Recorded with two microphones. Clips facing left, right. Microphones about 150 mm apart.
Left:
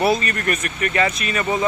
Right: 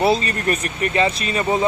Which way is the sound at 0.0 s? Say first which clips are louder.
Right 1 dB; 30° right (ahead or behind).